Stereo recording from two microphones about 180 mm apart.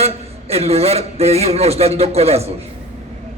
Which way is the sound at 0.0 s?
35° right (ahead or behind).